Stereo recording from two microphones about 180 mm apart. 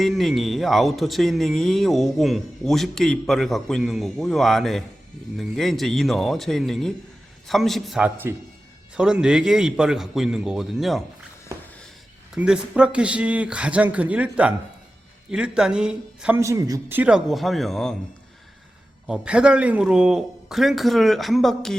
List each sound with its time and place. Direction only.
0.0 s a man's voice: centre (ahead or behind)
12.3 s a man's voice: 5° right (ahead or behind)
16.4 s speech: 20° right (ahead or behind)
17.0 s a man's voice: 5° right (ahead or behind)
19.0 s a man's voice: 5° right (ahead or behind)